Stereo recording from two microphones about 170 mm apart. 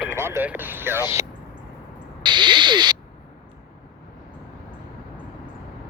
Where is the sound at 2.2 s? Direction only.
25° right (ahead or behind).